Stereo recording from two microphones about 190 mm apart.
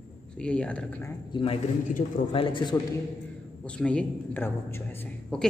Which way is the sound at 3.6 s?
5° left (ahead or behind).